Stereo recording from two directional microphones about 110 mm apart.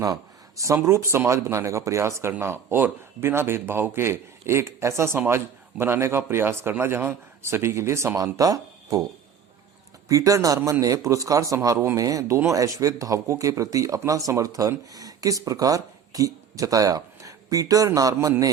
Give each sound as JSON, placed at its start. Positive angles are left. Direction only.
{"t": 0.0, "sound": "speech", "side_deg": -30}
{"t": 10.1, "sound": "speech", "side_deg": -30}